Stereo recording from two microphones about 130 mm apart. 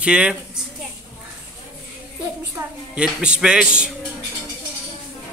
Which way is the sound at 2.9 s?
10° right (ahead or behind).